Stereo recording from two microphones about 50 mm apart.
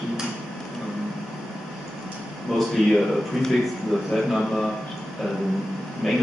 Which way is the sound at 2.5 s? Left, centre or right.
Centre.